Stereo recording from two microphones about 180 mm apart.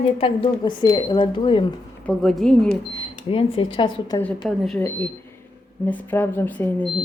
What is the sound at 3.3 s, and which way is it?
Speech, 30° left (ahead or behind).